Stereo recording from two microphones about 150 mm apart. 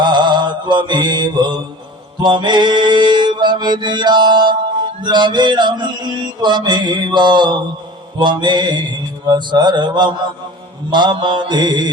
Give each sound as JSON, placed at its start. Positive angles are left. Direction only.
{"t": 0.0, "sound": "mantra", "side_deg": -30}